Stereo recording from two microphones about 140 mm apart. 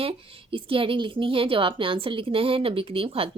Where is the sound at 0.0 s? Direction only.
40° right (ahead or behind).